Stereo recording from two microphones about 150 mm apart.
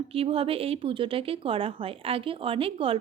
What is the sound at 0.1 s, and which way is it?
A woman's voice, 40° right (ahead or behind).